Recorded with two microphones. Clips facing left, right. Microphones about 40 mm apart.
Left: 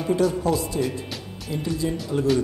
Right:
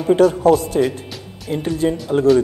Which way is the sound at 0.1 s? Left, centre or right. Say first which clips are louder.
Right 9 dB; right.